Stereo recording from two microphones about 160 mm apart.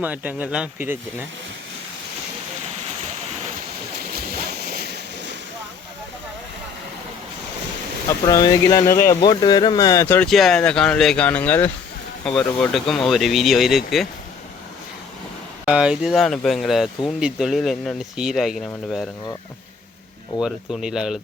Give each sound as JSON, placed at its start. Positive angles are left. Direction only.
{"t": 0.0, "sound": "speech", "side_deg": -10}
{"t": 4.1, "sound": "ocean", "side_deg": -75}
{"t": 8.3, "sound": "speech", "side_deg": 20}
{"t": 10.2, "sound": "speech", "side_deg": 0}
{"t": 15.6, "sound": "speech", "side_deg": -5}
{"t": 20.4, "sound": "speech", "side_deg": -5}